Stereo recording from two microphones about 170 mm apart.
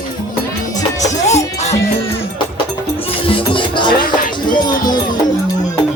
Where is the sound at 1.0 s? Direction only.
40° left (ahead or behind).